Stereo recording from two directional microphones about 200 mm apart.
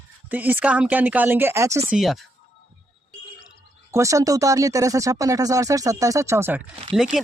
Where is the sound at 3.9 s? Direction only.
15° right (ahead or behind).